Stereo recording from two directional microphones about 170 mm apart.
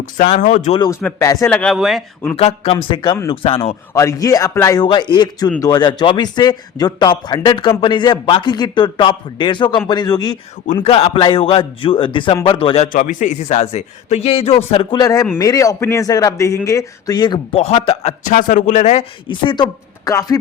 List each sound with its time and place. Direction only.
0.2 s speech: 45° left (ahead or behind)
0.9 s speech: 20° left (ahead or behind)
1.5 s speech: centre (ahead or behind)
2.3 s a man's voice: 35° left (ahead or behind)
3.9 s a man's voice: 20° left (ahead or behind)
10.8 s a man's voice: 35° left (ahead or behind)
12.9 s a man's voice: 50° left (ahead or behind); by 18.1 s 35° left (ahead or behind)
18.3 s speech: 50° left (ahead or behind)
19.3 s a man's voice: 25° left (ahead or behind)